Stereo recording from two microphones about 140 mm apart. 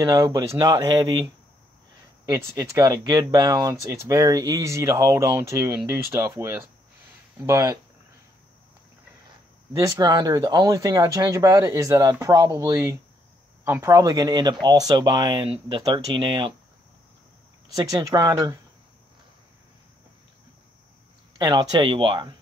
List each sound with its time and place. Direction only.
0.0 s speech: 25° right (ahead or behind)
9.8 s speech: 25° right (ahead or behind)
17.7 s speech: 25° right (ahead or behind)
21.4 s speech: 30° right (ahead or behind)